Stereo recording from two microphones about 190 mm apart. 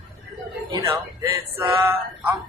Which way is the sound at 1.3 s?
20° right (ahead or behind).